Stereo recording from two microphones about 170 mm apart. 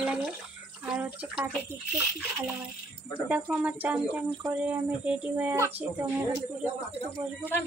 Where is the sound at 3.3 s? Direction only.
10° right (ahead or behind).